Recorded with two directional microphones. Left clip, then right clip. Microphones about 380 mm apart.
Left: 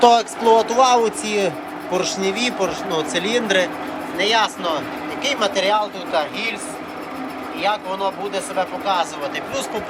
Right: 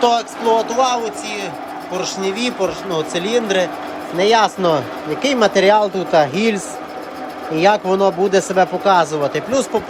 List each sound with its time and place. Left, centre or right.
0.0 s speech: centre